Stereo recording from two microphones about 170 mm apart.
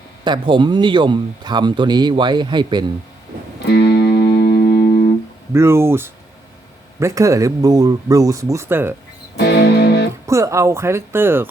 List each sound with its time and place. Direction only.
0.3 s speech: 30° right (ahead or behind)
3.7 s music: 75° left (ahead or behind)
4.4 s music: 60° left (ahead or behind)
5.5 s speech: 15° right (ahead or behind)
9.4 s music: 70° left (ahead or behind)
10.2 s speech: 15° right (ahead or behind)